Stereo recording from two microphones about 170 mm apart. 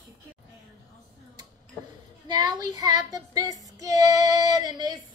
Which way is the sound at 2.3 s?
25° right (ahead or behind).